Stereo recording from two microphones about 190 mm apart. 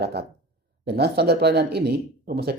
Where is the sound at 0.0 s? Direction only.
60° right (ahead or behind).